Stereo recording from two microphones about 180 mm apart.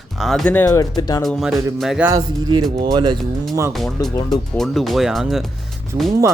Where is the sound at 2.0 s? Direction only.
20° right (ahead or behind).